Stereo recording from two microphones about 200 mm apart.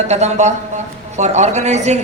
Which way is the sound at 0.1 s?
35° right (ahead or behind).